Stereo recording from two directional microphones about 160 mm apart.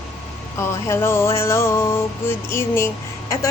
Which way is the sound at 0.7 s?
15° left (ahead or behind).